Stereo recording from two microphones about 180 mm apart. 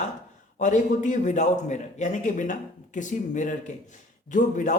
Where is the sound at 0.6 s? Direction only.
45° left (ahead or behind).